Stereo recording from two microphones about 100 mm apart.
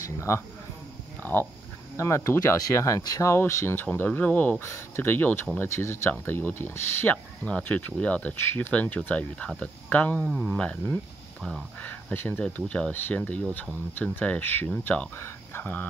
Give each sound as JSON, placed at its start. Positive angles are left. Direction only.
{"t": 0.0, "sound": "speech", "side_deg": 30}
{"t": 4.6, "sound": "speech", "side_deg": 25}
{"t": 10.2, "sound": "speech", "side_deg": 5}
{"t": 11.8, "sound": "speech", "side_deg": 20}